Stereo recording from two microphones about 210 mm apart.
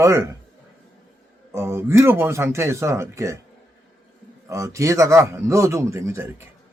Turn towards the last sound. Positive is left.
turn(degrees=-15)  # may be behind; listen again after turning